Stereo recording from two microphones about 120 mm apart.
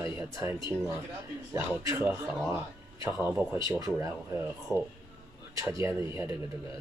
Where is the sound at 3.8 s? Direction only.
25° right (ahead or behind).